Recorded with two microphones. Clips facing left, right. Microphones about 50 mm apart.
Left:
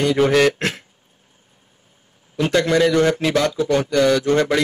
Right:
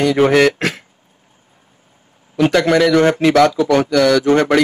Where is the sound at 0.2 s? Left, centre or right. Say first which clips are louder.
Right 4 dB; right.